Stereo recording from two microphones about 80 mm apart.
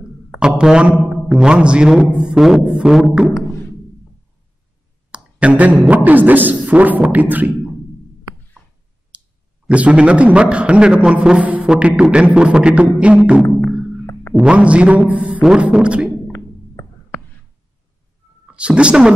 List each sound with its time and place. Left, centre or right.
0.4 s a man's voice: centre
2.4 s a sound: centre
2.9 s a man's voice: centre
5.1 s speech: centre
9.1 s clicking: centre
9.7 s a man's voice: centre
16.3 s a sound: left
18.5 s speech: centre